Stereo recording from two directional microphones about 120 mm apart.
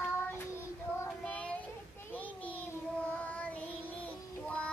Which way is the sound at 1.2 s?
10° left (ahead or behind).